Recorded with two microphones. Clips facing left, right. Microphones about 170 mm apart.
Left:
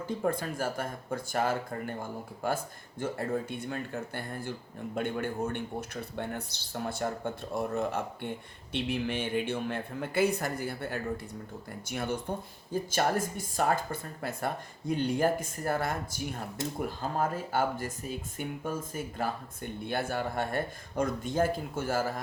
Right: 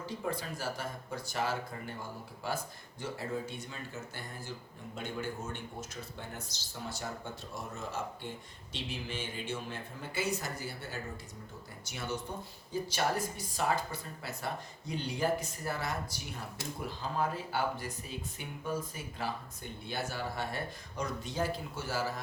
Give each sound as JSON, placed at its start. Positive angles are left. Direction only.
{"t": 0.0, "sound": "speech", "side_deg": 50}